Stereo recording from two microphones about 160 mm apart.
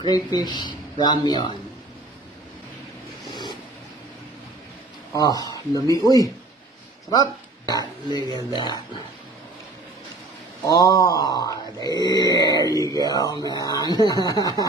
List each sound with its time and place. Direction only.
0.1 s mantra: 25° left (ahead or behind)
5.1 s mantra: 25° left (ahead or behind)
7.1 s speech: 25° left (ahead or behind)
8.1 s mantra: 25° left (ahead or behind)
10.6 s mantra: 25° left (ahead or behind)